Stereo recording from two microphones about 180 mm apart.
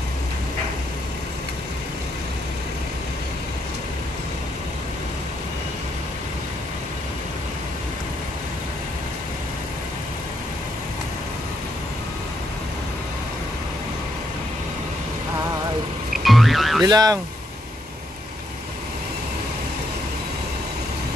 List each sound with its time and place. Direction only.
16.3 s music: centre (ahead or behind)
16.8 s speech: 20° right (ahead or behind)